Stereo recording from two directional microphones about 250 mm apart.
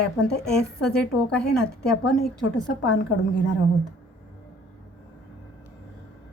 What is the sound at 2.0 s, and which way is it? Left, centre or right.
A woman's voice, left.